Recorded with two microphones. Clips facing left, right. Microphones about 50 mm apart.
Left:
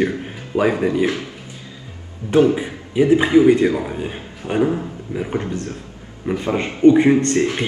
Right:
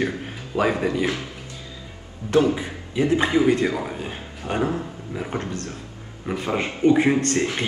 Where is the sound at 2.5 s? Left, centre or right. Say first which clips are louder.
Left 7 dB; left.